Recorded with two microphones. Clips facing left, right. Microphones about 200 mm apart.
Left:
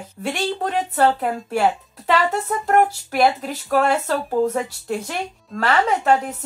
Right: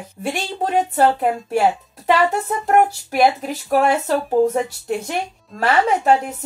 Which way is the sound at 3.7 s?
15° right (ahead or behind).